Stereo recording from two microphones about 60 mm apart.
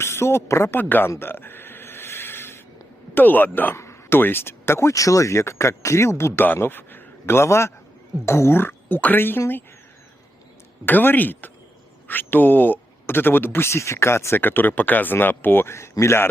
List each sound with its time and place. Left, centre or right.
0.0 s speech: left
1.2 s a sound: left
3.2 s speech: left
3.8 s a sound: left
4.2 s speech: left
6.4 s a man's voice: left
10.8 s speech: left
14.4 s speech: left